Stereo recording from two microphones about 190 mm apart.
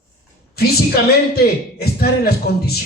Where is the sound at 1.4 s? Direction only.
55° left (ahead or behind).